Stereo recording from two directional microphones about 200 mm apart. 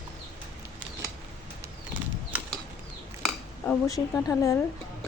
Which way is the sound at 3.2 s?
5° left (ahead or behind).